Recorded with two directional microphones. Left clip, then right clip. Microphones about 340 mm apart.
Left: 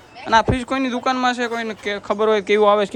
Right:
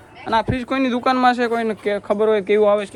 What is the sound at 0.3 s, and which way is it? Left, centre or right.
Speech, centre.